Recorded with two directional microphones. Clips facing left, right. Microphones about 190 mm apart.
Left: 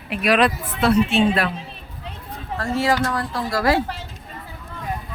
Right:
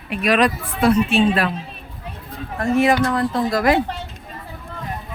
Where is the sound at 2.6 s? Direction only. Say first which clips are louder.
Right 4 dB; 20° right (ahead or behind).